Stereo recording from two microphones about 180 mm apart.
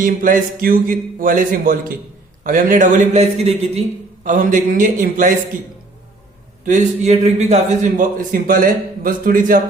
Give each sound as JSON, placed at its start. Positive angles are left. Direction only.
{"t": 0.0, "sound": "a man's voice", "side_deg": -50}
{"t": 6.7, "sound": "a man's voice", "side_deg": -40}